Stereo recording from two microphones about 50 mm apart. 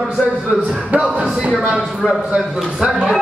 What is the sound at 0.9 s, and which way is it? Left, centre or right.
Music, right.